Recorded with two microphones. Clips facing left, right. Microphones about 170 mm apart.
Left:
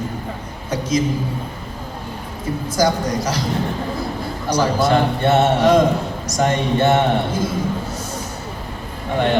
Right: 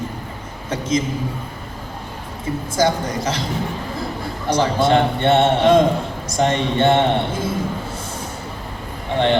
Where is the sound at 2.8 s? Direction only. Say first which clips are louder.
Left 1 dB; 25° right (ahead or behind).